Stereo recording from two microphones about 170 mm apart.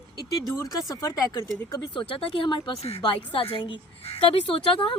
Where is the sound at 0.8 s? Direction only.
20° left (ahead or behind).